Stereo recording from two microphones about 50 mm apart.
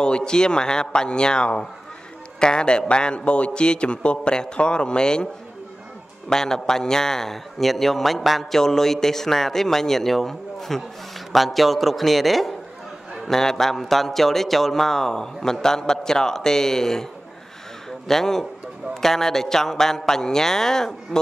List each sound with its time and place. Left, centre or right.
0.0 s a man's voice: centre